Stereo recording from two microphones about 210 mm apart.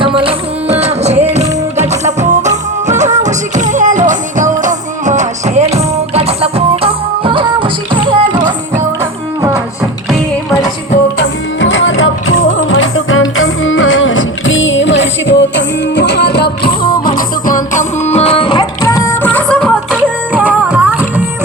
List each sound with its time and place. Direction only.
0.0 s music: 25° right (ahead or behind)
11.2 s music: 65° left (ahead or behind); by 20.0 s 5° left (ahead or behind)
20.3 s music: 5° right (ahead or behind)